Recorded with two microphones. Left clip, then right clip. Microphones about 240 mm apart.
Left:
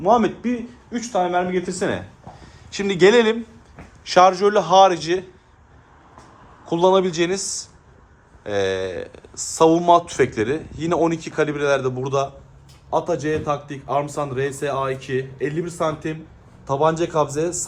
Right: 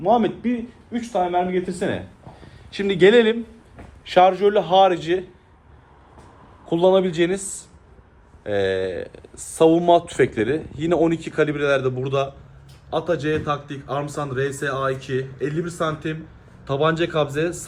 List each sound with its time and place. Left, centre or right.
0.0 s a man's voice: left
6.7 s speech: centre
8.4 s a man's voice: centre